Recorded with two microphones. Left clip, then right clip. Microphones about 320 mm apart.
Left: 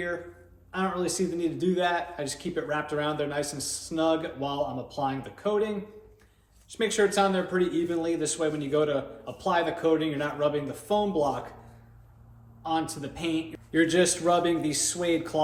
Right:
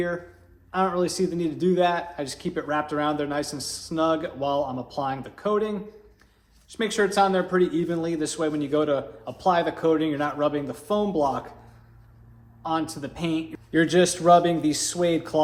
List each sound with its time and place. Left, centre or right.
0.7 s a man's voice: centre
12.6 s a man's voice: centre